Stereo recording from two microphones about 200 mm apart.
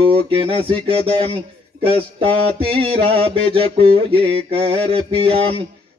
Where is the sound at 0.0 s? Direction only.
25° right (ahead or behind).